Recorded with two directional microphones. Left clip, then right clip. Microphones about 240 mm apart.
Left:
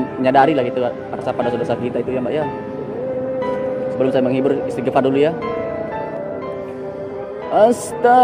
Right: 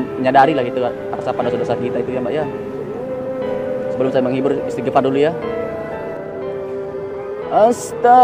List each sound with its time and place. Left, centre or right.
0.2 s a man's voice: centre
4.0 s a man's voice: centre
7.5 s a man's voice: centre